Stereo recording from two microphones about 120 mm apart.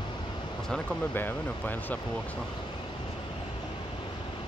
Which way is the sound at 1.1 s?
15° left (ahead or behind).